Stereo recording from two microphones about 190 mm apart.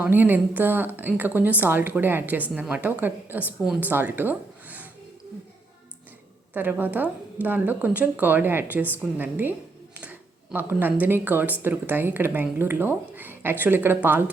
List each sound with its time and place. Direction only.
0.0 s a woman's voice: 10° right (ahead or behind)
6.5 s a woman's voice: 10° right (ahead or behind)
10.0 s a sound: 10° right (ahead or behind)
11.0 s a woman's voice: 10° right (ahead or behind)